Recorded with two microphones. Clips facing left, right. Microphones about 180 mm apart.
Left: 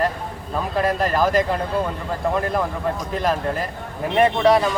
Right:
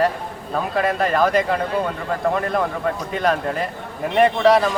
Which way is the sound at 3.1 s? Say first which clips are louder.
Right 1 dB; centre (ahead or behind).